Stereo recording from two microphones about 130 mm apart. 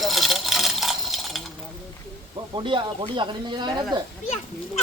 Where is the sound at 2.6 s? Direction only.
40° right (ahead or behind).